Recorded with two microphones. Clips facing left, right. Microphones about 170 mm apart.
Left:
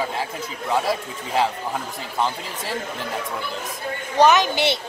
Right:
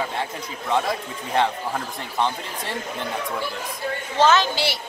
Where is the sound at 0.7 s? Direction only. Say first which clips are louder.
Left 1 dB; 5° left (ahead or behind).